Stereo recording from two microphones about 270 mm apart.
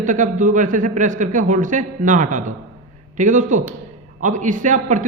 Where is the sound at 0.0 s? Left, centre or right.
Right.